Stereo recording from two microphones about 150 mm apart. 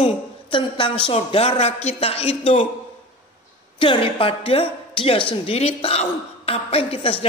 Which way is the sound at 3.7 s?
35° left (ahead or behind).